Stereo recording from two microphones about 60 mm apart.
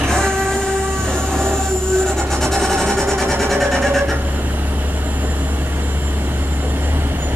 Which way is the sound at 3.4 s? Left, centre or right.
Centre.